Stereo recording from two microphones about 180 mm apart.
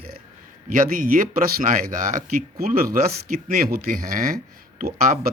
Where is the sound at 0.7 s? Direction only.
50° right (ahead or behind).